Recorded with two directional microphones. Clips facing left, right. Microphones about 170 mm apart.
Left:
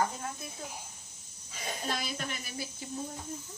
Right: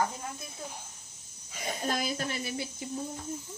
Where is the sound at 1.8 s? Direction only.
45° right (ahead or behind).